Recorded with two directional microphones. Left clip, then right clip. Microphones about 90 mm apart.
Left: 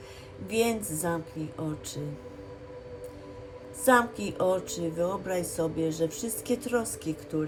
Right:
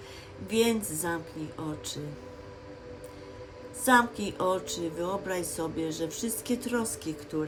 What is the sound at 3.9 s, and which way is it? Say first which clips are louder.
Speech: even; 15° right (ahead or behind).